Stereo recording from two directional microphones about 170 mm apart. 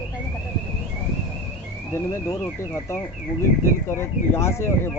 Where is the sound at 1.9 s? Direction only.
15° left (ahead or behind).